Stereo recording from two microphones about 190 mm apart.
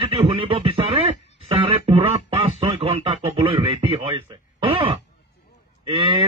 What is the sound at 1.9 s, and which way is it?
Speech, 30° right (ahead or behind).